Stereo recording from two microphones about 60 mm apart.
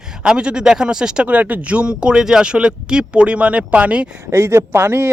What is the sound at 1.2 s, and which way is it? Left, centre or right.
Speech, right.